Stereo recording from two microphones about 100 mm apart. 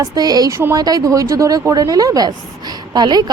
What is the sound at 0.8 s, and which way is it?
Speech, 40° right (ahead or behind).